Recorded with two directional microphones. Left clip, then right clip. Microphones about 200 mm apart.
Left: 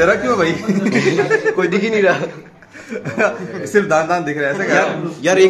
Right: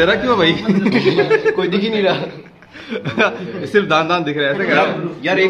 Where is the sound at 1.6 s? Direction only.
25° left (ahead or behind).